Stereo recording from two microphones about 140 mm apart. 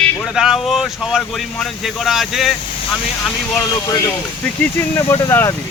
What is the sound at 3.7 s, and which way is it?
Speech, 25° left (ahead or behind).